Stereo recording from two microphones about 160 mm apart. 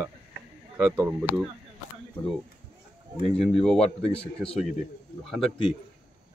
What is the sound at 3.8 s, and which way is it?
Speech, 40° left (ahead or behind).